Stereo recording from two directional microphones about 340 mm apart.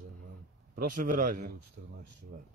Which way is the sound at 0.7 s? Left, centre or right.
Right.